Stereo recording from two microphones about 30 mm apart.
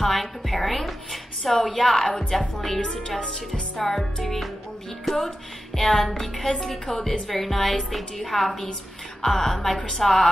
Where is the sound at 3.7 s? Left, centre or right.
Centre.